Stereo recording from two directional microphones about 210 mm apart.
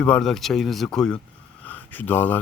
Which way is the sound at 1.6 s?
10° left (ahead or behind).